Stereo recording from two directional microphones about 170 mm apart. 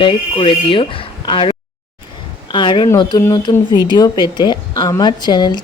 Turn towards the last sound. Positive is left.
turn(degrees=25)  # may be behind; listen again after turning